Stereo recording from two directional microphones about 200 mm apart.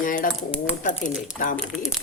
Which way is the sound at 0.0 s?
40° left (ahead or behind).